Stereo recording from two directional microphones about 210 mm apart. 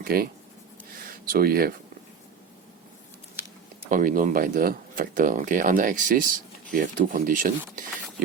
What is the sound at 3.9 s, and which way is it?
Speech, 40° right (ahead or behind).